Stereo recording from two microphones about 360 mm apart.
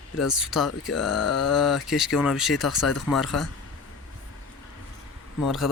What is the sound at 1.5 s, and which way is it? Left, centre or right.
Speech, centre.